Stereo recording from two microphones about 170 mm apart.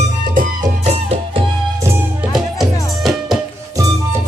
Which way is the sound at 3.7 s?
20° right (ahead or behind).